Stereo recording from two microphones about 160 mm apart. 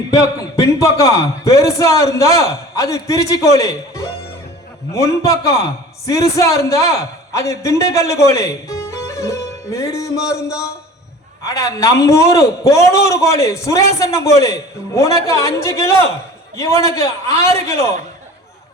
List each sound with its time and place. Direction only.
0.1 s a man's voice: 20° left (ahead or behind)